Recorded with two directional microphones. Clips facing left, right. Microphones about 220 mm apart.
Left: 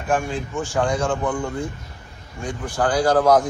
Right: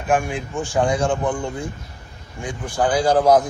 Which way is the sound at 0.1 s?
15° right (ahead or behind).